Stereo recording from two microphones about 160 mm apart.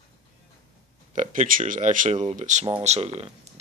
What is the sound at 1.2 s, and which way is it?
Speech, 55° right (ahead or behind).